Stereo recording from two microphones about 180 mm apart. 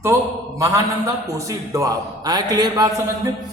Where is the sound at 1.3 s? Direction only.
15° right (ahead or behind).